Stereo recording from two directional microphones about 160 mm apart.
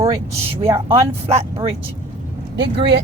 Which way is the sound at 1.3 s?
40° right (ahead or behind).